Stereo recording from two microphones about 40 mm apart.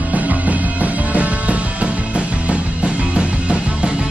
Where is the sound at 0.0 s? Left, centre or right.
Right.